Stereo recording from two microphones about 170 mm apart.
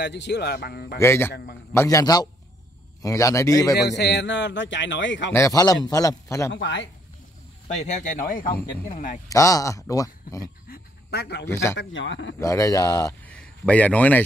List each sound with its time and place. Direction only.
0.0 s a man's voice: 85° left; by 0.9 s 65° left (ahead or behind)
0.9 s a man's voice: 15° left (ahead or behind)
1.3 s a man's voice: 65° left (ahead or behind)
1.7 s a man's voice: 20° left (ahead or behind)
3.7 s a man's voice: 80° left
5.3 s a man's voice: 20° left (ahead or behind)
6.5 s a man's voice: 90° left
7.6 s speech: 45° left (ahead or behind)
9.3 s a man's voice: 20° left (ahead or behind)
10.7 s a sound: 70° left (ahead or behind)
11.4 s a man's voice: 15° left (ahead or behind)
11.7 s a man's voice: 90° left
12.4 s a man's voice: 20° left (ahead or behind)
13.3 s a man's voice: 5° left (ahead or behind)